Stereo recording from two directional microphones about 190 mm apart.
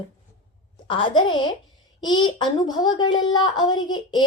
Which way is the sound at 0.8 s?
25° left (ahead or behind).